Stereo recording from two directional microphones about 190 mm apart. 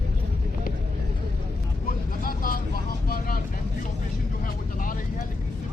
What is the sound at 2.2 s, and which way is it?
Vehicle, 50° left (ahead or behind).